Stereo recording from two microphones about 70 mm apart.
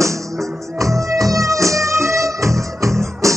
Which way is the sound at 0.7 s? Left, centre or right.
Right.